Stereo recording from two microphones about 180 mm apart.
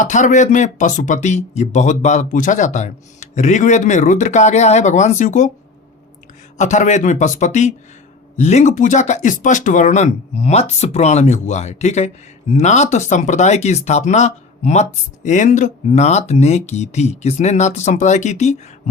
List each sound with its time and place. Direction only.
0.0 s speech: 45° left (ahead or behind)
6.6 s speech: 40° left (ahead or behind)